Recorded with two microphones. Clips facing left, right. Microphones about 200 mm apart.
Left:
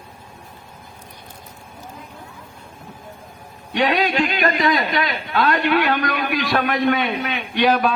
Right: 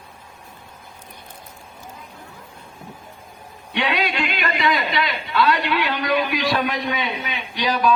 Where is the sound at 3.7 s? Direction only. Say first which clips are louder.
Left 4 dB; 40° left (ahead or behind).